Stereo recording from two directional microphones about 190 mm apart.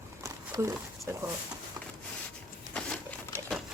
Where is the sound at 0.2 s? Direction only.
15° right (ahead or behind).